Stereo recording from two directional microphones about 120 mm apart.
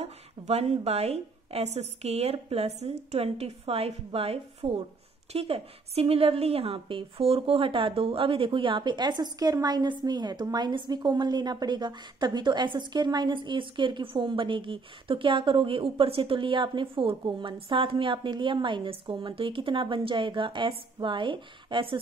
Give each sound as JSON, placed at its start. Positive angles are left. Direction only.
{"t": 0.0, "sound": "a woman's voice", "side_deg": -60}